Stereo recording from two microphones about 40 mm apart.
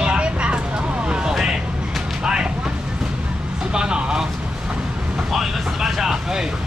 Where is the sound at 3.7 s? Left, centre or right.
Right.